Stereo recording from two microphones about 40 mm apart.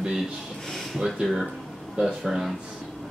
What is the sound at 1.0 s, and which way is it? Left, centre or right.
Speech, centre.